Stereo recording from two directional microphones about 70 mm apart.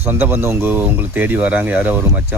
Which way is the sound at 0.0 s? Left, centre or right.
Right.